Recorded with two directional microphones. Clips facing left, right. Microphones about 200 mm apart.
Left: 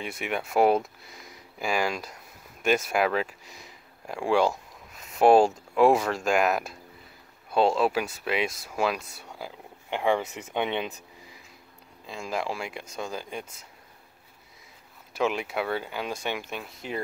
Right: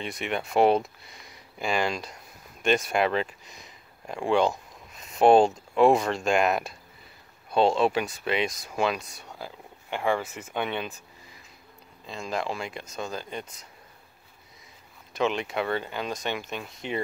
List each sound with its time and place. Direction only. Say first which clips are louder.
0.0 s speech: right 1 dB; 5° left (ahead or behind)
9.8 s speech: left 2 dB; 15° left (ahead or behind)
15.1 s speech: even; 5° left (ahead or behind)